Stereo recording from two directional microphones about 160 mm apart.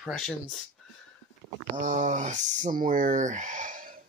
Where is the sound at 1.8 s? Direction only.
55° right (ahead or behind).